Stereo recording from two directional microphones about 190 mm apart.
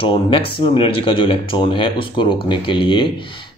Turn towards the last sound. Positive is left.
turn(degrees=25)  # may be behind; listen again after turning